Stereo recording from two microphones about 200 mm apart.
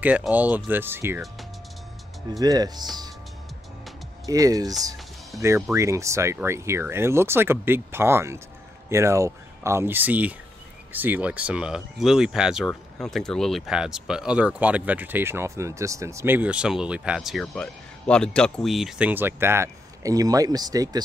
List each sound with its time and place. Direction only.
0.0 s speech: 5° right (ahead or behind)
2.4 s speech: 20° right (ahead or behind)
4.3 s speech: 15° right (ahead or behind)